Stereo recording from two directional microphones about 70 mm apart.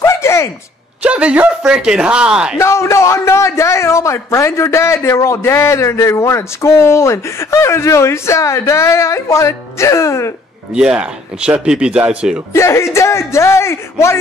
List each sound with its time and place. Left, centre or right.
0.0 s a sound: left
1.0 s speech: centre
2.6 s a man's voice: left
10.7 s speech: centre
12.5 s speech: left